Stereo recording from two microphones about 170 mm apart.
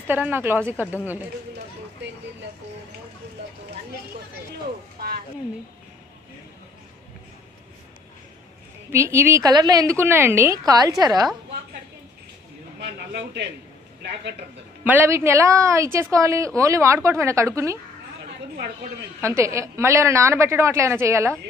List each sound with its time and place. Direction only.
0.0 s a woman's voice: 10° right (ahead or behind)
2.0 s speech: 90° right
8.9 s a woman's voice: 15° right (ahead or behind)
12.8 s speech: 80° right
14.9 s a woman's voice: 15° right (ahead or behind)
19.2 s a woman's voice: 15° right (ahead or behind)